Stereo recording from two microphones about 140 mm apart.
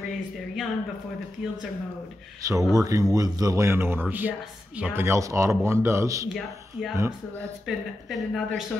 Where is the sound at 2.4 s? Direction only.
25° right (ahead or behind).